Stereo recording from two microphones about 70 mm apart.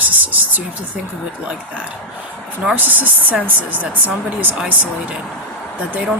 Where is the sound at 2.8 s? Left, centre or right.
Right.